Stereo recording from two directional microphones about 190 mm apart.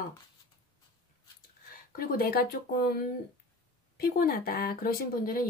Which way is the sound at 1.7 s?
50° left (ahead or behind).